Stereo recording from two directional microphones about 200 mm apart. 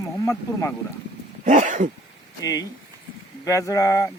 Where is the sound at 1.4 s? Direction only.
40° right (ahead or behind).